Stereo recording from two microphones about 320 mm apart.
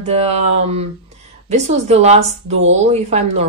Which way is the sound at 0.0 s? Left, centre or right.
Centre.